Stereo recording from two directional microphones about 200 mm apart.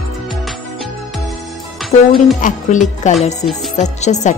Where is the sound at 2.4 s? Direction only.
40° left (ahead or behind).